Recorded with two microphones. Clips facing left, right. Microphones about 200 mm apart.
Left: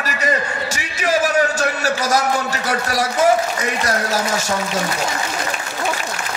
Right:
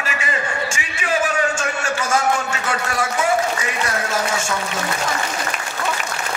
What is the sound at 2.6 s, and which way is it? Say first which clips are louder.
A man's voice: left 2 dB; 40° left (ahead or behind).